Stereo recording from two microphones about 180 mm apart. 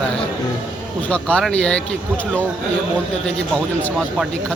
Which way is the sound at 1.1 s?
5° left (ahead or behind).